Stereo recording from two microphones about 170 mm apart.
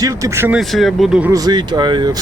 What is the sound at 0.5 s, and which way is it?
Speech, centre (ahead or behind).